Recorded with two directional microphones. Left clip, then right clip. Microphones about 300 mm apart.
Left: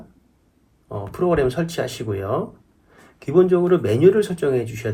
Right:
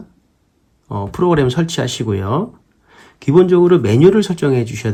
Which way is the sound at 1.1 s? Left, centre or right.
Right.